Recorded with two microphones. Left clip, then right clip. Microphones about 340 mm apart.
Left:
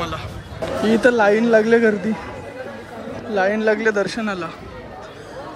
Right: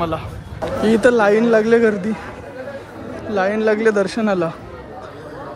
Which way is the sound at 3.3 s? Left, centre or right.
Centre.